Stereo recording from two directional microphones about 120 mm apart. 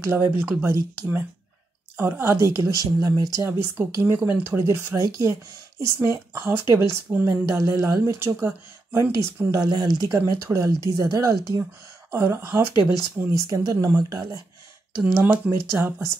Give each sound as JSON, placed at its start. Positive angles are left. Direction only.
{"t": 0.0, "sound": "speech", "side_deg": -20}
{"t": 3.4, "sound": "speech", "side_deg": -15}
{"t": 15.1, "sound": "speech", "side_deg": -15}